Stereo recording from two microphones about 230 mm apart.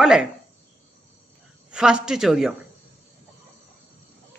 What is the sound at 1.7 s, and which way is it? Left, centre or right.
Speech, centre.